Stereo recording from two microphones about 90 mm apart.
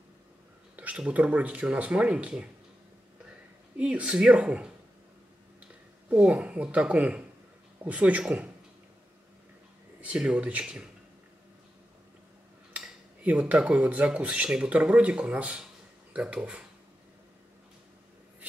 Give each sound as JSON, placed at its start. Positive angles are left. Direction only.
{"t": 0.7, "sound": "speech", "side_deg": -15}
{"t": 3.7, "sound": "speech", "side_deg": -15}
{"t": 6.0, "sound": "speech", "side_deg": -15}
{"t": 9.9, "sound": "speech", "side_deg": -10}
{"t": 12.7, "sound": "speech", "side_deg": -15}